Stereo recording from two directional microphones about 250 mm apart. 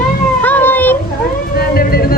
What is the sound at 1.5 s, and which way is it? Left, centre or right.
Speech, left.